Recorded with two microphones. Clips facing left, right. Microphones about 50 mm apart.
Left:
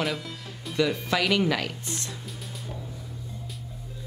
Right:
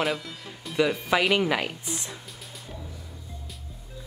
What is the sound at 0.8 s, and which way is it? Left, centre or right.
Speech, centre.